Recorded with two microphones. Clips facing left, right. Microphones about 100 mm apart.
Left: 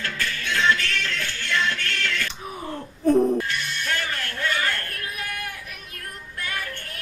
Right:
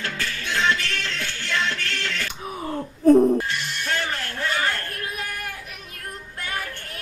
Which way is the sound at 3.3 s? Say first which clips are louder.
Right 1 dB; 25° right (ahead or behind).